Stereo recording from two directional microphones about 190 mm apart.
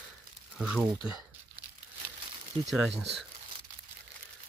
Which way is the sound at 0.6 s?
5° right (ahead or behind).